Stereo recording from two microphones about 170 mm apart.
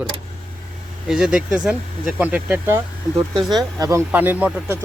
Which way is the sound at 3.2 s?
25° right (ahead or behind).